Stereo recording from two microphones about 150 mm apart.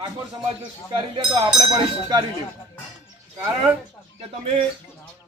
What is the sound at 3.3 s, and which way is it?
Speech, 30° right (ahead or behind).